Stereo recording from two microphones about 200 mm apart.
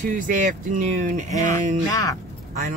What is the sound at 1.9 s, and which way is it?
Speech, 15° left (ahead or behind).